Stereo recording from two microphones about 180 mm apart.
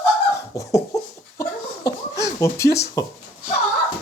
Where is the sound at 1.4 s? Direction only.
20° left (ahead or behind).